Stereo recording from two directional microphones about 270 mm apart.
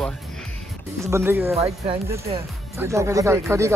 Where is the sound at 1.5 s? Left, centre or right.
Right.